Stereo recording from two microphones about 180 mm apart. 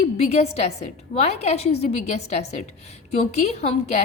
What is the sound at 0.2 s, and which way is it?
A woman's voice, 35° left (ahead or behind).